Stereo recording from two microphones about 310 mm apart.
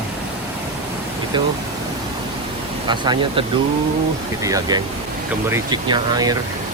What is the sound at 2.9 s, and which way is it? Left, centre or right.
Speech, centre.